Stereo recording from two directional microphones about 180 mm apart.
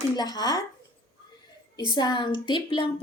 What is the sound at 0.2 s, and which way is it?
Speech, 20° left (ahead or behind).